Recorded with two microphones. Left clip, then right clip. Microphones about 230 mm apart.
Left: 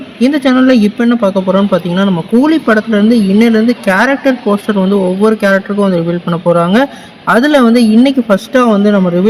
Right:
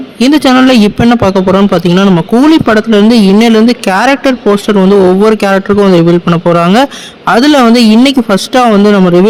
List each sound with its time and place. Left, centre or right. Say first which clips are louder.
0.2 s speech: right 4 dB; right